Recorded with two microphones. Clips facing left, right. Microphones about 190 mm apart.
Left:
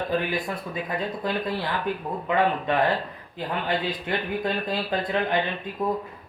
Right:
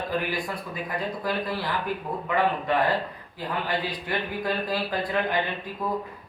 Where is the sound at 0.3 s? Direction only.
25° left (ahead or behind).